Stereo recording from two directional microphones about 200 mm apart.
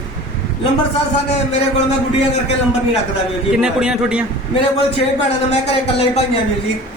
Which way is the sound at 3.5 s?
5° right (ahead or behind).